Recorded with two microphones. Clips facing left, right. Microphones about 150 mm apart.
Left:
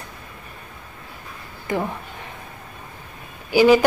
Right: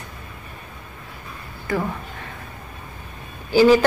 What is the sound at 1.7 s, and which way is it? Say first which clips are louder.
Speech: even; 20° left (ahead or behind).